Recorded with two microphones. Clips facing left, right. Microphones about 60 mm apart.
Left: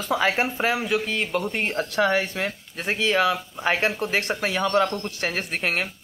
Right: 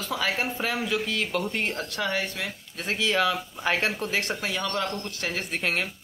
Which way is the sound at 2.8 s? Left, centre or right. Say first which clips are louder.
Left 3 dB; centre.